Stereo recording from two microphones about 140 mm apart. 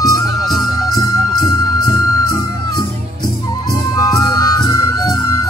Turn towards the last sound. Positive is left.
turn(degrees=25)  # may be behind; listen again after turning